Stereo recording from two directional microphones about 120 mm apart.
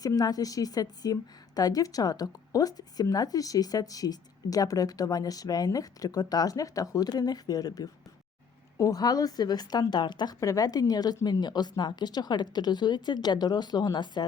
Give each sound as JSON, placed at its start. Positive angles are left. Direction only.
{"t": 0.0, "sound": "a woman's voice", "side_deg": 30}